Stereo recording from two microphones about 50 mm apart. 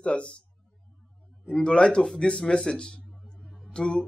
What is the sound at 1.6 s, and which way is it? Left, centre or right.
A man's voice, left.